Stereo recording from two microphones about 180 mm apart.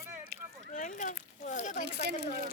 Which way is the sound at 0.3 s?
60° right (ahead or behind).